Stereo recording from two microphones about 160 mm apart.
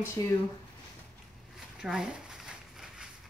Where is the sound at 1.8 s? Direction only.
5° right (ahead or behind).